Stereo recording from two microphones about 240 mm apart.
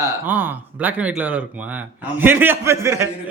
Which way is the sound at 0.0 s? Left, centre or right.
Centre.